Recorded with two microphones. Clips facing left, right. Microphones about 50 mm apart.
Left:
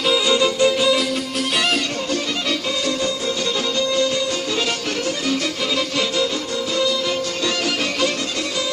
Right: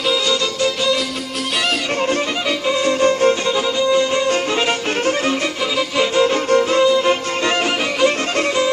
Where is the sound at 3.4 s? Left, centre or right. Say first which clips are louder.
Right 4 dB; right.